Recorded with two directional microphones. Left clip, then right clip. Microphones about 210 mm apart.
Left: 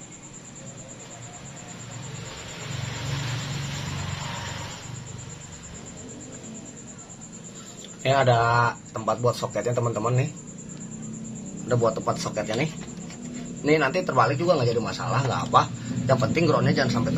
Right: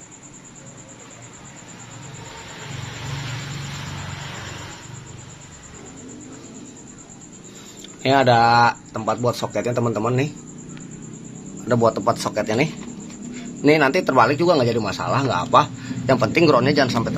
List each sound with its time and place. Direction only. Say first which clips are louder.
8.0 s speech: right 5 dB; 45° right (ahead or behind)
11.6 s speech: right 6 dB; 50° right (ahead or behind)
13.7 s speech: right 6 dB; 50° right (ahead or behind)